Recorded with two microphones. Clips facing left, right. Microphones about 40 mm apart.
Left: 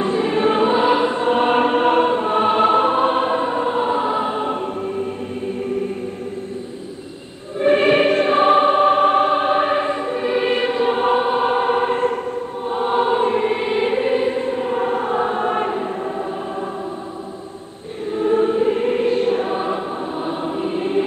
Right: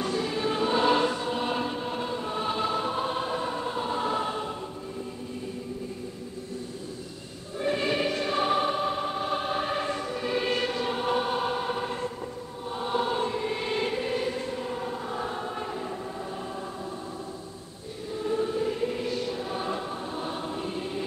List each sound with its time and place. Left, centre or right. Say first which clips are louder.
0.0 s choir: left 10 dB; left
0.7 s choir: left 7 dB; left
1.2 s music: left 13 dB; left
4.5 s music: left 13 dB; left
7.5 s choir: left 12 dB; left
9.3 s choir: left 11 dB; left
18.1 s choir: left 11 dB; left
19.6 s choir: left 9 dB; left